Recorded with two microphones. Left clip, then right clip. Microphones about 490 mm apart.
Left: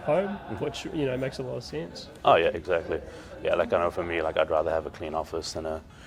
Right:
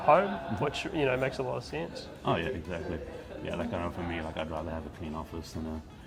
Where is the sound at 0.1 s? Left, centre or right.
Right.